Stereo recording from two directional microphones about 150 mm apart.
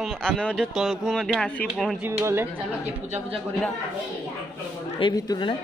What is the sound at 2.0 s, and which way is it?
Speech, 15° right (ahead or behind).